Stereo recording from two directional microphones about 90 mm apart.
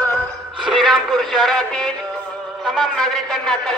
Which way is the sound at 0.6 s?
Centre (ahead or behind).